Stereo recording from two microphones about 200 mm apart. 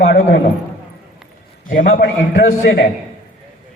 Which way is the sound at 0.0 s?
45° left (ahead or behind).